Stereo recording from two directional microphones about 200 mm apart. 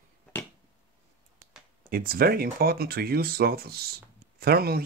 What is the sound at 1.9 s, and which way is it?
Speech, 50° right (ahead or behind).